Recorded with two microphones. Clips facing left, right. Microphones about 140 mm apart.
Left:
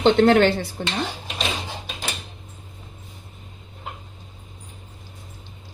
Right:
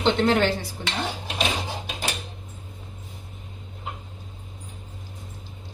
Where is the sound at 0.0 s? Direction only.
60° left (ahead or behind).